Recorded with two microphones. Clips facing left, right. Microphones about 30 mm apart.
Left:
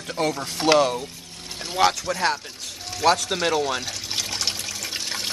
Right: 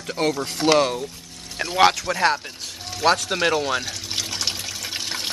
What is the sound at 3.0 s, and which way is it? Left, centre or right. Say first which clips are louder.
Speech: even; centre.